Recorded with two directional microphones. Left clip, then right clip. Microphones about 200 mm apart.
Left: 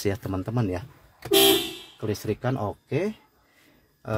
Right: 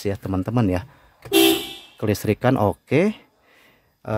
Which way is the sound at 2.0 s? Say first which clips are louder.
Right 8 dB; 40° right (ahead or behind).